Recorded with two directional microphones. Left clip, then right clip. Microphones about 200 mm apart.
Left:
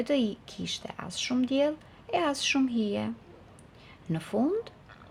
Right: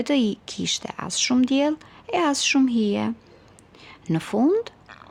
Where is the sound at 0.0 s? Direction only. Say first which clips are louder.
Right 5 dB; 40° right (ahead or behind).